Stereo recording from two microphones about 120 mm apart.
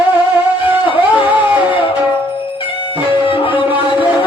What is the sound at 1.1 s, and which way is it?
Music, 15° right (ahead or behind).